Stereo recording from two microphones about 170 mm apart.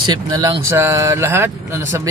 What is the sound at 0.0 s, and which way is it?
Speech, 25° right (ahead or behind).